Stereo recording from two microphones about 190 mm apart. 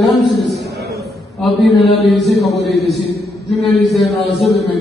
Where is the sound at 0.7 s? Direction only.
60° right (ahead or behind).